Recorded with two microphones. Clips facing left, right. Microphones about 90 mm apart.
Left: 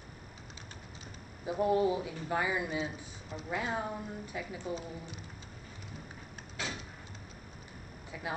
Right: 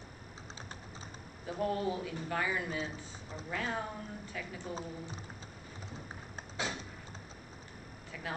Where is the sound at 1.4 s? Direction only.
15° left (ahead or behind).